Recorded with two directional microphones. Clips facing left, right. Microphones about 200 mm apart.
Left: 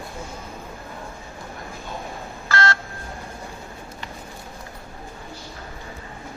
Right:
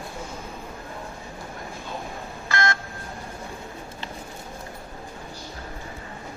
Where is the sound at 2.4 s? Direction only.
15° right (ahead or behind).